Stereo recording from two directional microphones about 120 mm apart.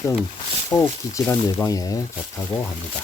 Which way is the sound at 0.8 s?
20° left (ahead or behind).